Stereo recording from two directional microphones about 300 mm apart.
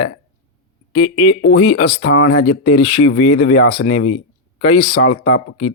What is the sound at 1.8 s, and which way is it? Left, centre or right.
Speech, left.